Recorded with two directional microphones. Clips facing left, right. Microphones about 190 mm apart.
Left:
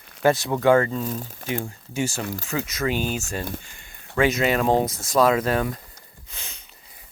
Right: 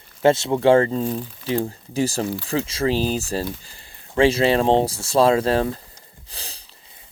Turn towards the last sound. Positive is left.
turn(degrees=-35)  # may be behind; listen again after turning